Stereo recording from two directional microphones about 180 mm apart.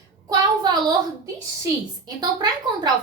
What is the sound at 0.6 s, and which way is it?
Speech, 25° right (ahead or behind).